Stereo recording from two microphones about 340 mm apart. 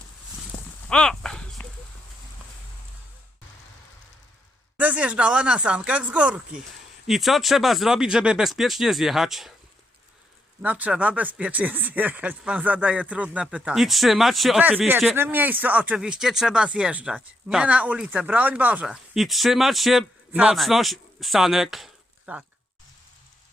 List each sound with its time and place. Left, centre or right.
0.5 s a sound: centre
0.9 s horse: centre
4.8 s speech: centre
10.6 s speech: centre